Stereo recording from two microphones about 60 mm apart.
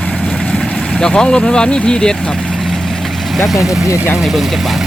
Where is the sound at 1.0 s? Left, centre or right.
Centre.